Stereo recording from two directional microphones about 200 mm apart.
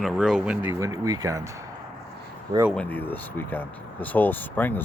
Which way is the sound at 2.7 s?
5° left (ahead or behind).